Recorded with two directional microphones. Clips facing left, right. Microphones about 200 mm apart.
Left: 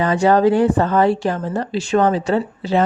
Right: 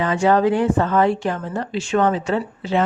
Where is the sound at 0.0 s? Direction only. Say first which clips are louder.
Left 3 dB; 40° left (ahead or behind).